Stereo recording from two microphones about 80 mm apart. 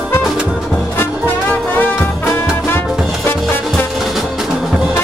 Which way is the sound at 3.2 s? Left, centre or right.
Left.